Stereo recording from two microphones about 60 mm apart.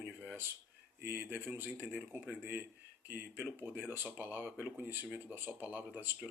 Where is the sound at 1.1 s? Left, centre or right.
Right.